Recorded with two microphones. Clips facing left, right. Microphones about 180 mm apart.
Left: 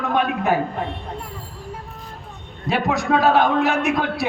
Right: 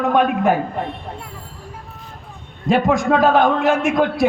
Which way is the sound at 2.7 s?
50° right (ahead or behind).